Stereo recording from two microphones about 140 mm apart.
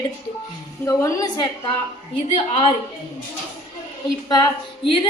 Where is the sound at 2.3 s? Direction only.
45° left (ahead or behind).